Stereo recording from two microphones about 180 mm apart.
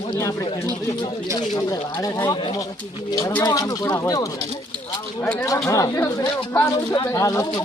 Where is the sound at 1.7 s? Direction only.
20° left (ahead or behind).